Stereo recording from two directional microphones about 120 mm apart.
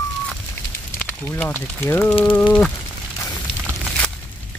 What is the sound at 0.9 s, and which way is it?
Speech, 15° left (ahead or behind).